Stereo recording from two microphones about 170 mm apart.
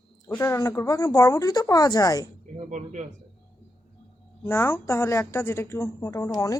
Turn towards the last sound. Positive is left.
turn(degrees=20)  # may be behind; listen again after turning